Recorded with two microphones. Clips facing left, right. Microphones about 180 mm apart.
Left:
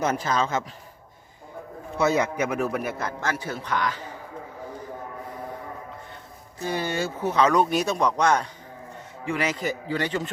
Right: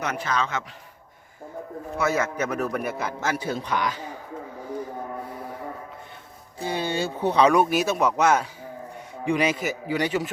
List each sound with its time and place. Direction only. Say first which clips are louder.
0.3 s a man's voice: left 2 dB; 40° left (ahead or behind)
2.0 s a man's voice: left 2 dB; 20° left (ahead or behind); by 3.1 s centre (ahead or behind)
3.1 s speech: right 2 dB; 10° right (ahead or behind)
6.6 s speech: right 1 dB; 15° right (ahead or behind)